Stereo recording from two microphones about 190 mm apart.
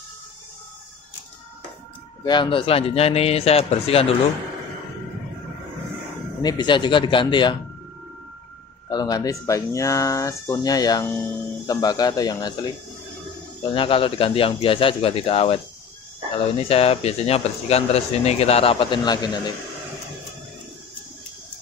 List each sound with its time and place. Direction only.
2.2 s speech: 25° left (ahead or behind)
6.4 s speech: 25° left (ahead or behind)
8.8 s speech: 20° left (ahead or behind)
13.7 s speech: 30° left (ahead or behind)